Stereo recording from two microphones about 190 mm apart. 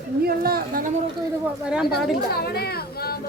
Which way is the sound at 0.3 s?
55° right (ahead or behind).